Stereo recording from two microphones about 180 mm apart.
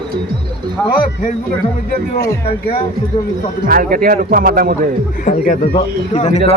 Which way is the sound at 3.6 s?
55° right (ahead or behind).